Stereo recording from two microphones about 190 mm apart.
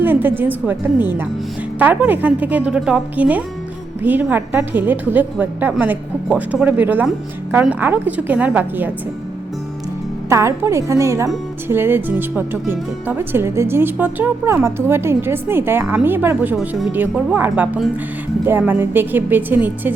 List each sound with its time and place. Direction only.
0.0 s speech: 10° right (ahead or behind)
10.2 s speech: 15° right (ahead or behind)